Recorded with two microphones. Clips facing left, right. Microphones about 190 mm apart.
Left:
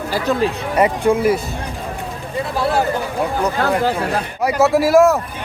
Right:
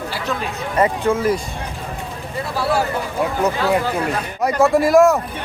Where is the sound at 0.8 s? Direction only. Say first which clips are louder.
Left 2 dB; 15° left (ahead or behind).